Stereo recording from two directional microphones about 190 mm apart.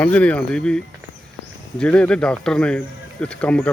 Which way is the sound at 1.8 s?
5° left (ahead or behind).